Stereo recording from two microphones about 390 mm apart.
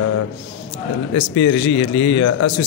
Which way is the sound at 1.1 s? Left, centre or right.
Left.